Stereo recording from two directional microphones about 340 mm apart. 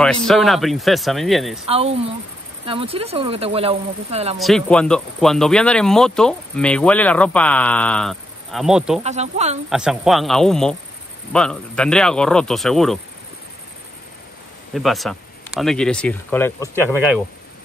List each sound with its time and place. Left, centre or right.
0.0 s speech: centre
1.7 s speech: centre
4.4 s speech: centre
9.0 s speech: centre
9.7 s speech: centre
14.7 s speech: centre